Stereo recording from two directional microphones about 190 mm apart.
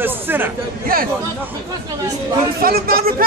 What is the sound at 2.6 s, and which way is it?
Speech, 50° right (ahead or behind).